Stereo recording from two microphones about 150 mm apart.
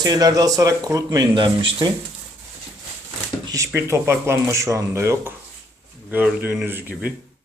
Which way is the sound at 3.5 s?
20° right (ahead or behind).